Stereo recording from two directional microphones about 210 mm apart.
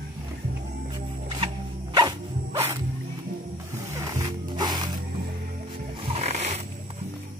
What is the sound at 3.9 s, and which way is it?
Music, 15° right (ahead or behind).